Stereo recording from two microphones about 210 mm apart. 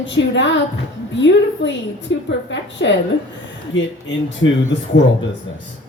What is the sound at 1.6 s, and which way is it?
A woman's voice, 60° left (ahead or behind).